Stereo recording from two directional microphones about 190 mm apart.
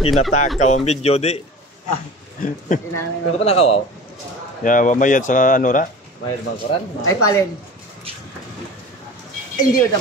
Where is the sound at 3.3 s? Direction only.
30° left (ahead or behind).